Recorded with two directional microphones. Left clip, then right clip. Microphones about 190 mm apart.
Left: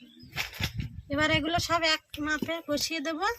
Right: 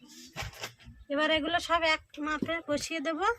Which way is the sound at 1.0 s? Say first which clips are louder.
Left 1 dB; 10° right (ahead or behind).